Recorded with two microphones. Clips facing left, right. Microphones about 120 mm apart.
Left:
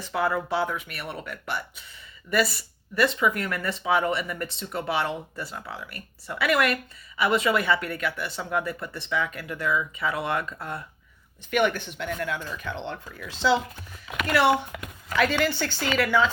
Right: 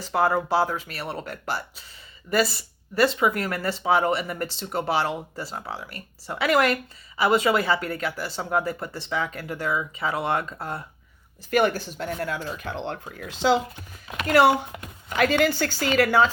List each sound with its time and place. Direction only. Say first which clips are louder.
0.2 s speech: right 4 dB; 30° right (ahead or behind)
12.9 s speech: right 3 dB; 60° right (ahead or behind)
13.4 s speech: right 2 dB; 45° right (ahead or behind)